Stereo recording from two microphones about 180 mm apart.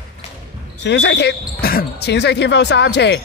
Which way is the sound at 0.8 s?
75° left (ahead or behind).